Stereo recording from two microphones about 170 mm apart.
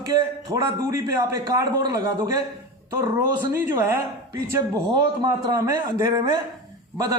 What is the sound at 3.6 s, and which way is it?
A man's voice, 15° right (ahead or behind).